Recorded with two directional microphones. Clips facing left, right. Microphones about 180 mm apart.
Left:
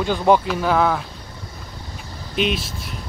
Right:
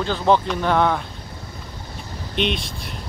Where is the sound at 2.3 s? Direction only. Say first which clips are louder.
Left 1 dB; 5° left (ahead or behind).